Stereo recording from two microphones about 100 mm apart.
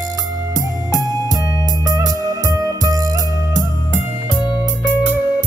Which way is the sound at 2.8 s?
35° right (ahead or behind).